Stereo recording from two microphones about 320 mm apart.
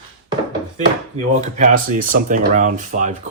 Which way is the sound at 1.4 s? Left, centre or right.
Right.